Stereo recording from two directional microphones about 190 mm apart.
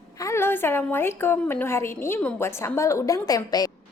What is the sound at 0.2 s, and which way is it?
A woman's voice, 15° left (ahead or behind).